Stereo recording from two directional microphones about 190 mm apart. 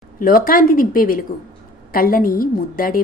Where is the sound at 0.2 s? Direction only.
50° left (ahead or behind).